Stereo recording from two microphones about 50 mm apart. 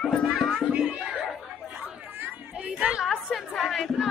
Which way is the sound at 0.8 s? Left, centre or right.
Right.